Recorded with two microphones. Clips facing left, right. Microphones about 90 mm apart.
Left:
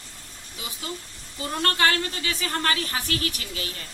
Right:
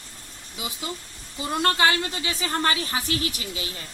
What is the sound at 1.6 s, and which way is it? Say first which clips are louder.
A woman's voice: right 1 dB; 15° right (ahead or behind).